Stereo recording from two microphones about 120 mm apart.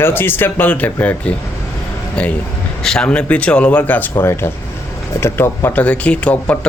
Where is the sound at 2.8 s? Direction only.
5° left (ahead or behind).